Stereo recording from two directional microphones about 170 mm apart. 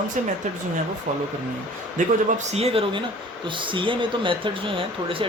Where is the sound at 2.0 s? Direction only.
50° right (ahead or behind).